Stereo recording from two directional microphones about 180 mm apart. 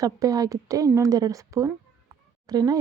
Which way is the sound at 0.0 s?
20° right (ahead or behind).